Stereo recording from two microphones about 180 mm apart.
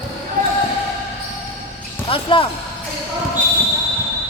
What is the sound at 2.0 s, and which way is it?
Speech, 30° left (ahead or behind).